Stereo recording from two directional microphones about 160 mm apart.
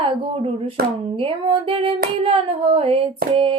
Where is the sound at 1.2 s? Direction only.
35° right (ahead or behind).